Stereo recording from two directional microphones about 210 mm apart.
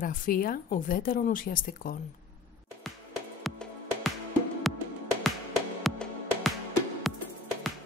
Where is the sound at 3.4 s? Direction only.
Centre (ahead or behind).